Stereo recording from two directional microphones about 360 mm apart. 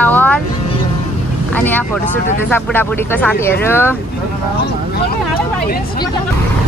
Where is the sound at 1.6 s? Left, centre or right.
Centre.